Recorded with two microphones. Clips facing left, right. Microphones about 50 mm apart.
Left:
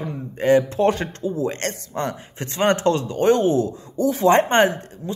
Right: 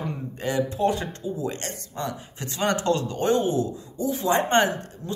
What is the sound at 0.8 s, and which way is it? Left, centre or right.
Speech, left.